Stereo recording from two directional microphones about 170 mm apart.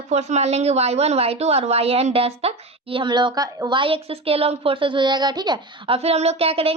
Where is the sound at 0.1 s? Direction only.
40° right (ahead or behind).